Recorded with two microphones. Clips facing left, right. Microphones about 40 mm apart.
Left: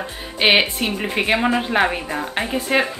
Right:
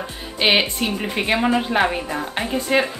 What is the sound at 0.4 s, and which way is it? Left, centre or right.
A woman's voice, centre.